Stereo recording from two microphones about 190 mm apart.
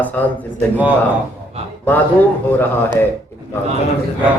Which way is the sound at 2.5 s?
10° left (ahead or behind).